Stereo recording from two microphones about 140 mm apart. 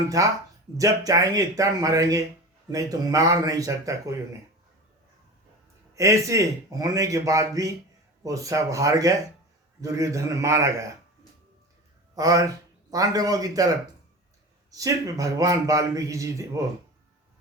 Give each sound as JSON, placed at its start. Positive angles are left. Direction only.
{"t": 0.2, "sound": "a man's voice", "side_deg": -25}
{"t": 5.9, "sound": "a man's voice", "side_deg": -20}
{"t": 12.1, "sound": "a man's voice", "side_deg": -25}
{"t": 14.7, "sound": "a man's voice", "side_deg": -25}